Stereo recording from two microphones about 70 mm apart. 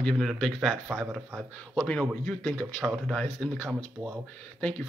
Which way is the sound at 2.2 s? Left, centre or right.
Centre.